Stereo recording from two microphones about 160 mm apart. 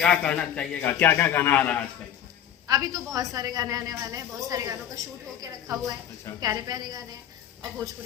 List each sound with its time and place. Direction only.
0.0 s a man's voice: 5° left (ahead or behind)
2.6 s a woman's voice: 20° right (ahead or behind)